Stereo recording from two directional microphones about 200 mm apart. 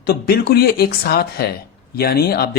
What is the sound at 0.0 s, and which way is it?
Speech, 55° left (ahead or behind).